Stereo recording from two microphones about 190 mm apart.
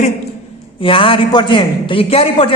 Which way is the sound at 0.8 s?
30° left (ahead or behind).